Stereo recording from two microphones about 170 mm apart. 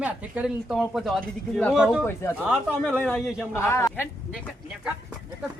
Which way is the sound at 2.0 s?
15° left (ahead or behind).